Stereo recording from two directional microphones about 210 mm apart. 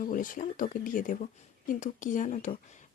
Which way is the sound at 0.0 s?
40° left (ahead or behind).